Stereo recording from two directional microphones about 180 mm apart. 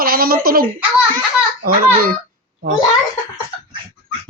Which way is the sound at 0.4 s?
55° right (ahead or behind).